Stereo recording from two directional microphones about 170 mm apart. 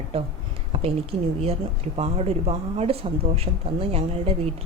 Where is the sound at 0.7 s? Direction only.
35° right (ahead or behind).